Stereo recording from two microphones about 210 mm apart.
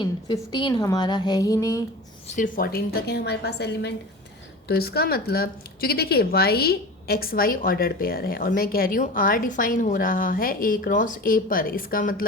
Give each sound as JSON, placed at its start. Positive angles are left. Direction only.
{"t": 0.0, "sound": "a woman's voice", "side_deg": 20}
{"t": 2.2, "sound": "speech", "side_deg": 35}